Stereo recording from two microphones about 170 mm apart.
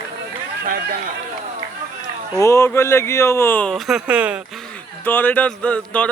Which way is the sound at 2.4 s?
15° left (ahead or behind).